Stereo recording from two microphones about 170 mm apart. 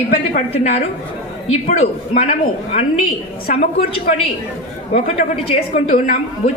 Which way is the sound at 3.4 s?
55° left (ahead or behind).